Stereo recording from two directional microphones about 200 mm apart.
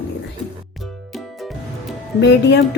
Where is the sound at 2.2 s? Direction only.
60° left (ahead or behind).